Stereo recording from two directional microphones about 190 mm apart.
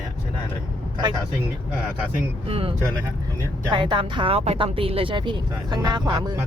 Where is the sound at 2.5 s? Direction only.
30° right (ahead or behind).